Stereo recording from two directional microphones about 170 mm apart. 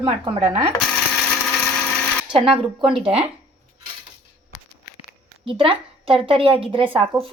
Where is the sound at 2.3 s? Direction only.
30° right (ahead or behind).